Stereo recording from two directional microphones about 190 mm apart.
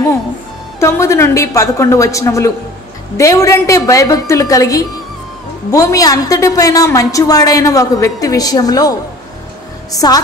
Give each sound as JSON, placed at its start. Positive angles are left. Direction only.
{"t": 0.7, "sound": "a woman's voice", "side_deg": 15}
{"t": 9.9, "sound": "a woman's voice", "side_deg": 20}